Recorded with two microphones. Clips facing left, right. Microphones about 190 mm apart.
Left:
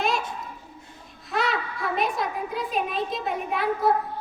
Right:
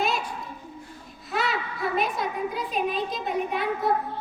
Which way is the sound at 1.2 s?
Centre (ahead or behind).